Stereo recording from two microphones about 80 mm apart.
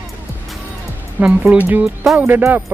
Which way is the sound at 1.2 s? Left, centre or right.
Centre.